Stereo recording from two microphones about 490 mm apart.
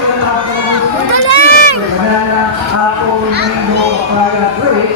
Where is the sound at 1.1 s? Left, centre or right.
Right.